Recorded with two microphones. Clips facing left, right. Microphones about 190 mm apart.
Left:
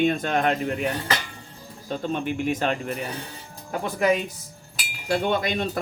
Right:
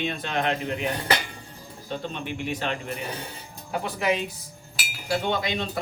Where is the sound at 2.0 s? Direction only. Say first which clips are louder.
Left 9 dB; 45° left (ahead or behind).